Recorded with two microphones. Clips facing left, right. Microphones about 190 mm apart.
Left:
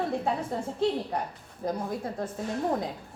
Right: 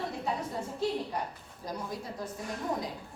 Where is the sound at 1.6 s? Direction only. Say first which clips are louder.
Left 7 dB; 55° left (ahead or behind).